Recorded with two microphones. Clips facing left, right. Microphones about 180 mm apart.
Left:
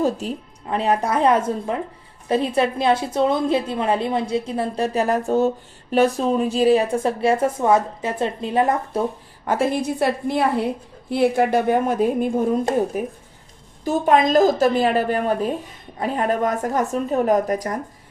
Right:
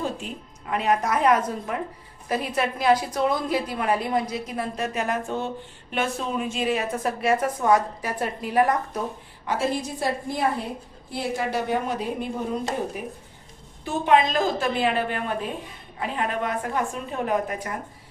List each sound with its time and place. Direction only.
0.0 s a woman's voice: 35° left (ahead or behind)
9.5 s a woman's voice: 55° left (ahead or behind); by 17.7 s 40° left (ahead or behind)